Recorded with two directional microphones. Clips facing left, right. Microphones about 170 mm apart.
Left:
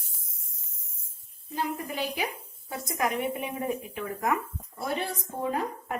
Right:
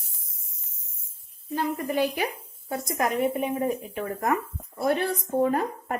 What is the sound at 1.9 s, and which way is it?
Speech, 50° right (ahead or behind).